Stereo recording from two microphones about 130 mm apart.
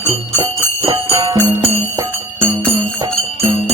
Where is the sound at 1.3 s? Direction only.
30° right (ahead or behind).